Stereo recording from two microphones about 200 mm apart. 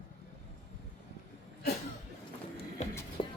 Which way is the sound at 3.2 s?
25° left (ahead or behind).